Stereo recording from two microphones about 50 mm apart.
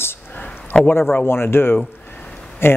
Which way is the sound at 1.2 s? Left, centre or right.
Left.